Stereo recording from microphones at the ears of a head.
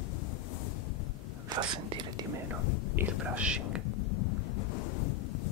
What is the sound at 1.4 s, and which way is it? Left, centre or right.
Speech, right.